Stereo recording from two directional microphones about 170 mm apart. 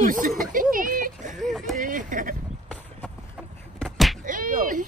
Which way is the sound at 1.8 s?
50° right (ahead or behind).